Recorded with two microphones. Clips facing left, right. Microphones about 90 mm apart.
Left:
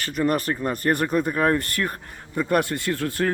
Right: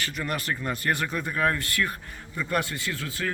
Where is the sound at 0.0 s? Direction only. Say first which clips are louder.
Left 8 dB; 40° left (ahead or behind).